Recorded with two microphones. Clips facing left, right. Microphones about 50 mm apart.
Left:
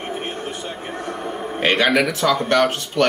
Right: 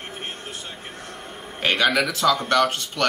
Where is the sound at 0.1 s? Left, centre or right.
Centre.